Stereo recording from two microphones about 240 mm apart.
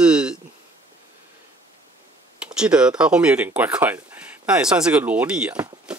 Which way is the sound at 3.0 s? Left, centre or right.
Centre.